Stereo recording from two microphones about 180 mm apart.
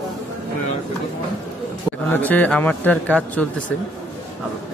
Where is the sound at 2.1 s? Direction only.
10° left (ahead or behind).